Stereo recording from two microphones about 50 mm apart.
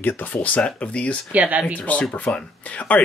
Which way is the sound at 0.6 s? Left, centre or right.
Left.